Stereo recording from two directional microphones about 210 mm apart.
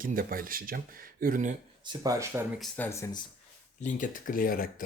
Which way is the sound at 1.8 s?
20° right (ahead or behind).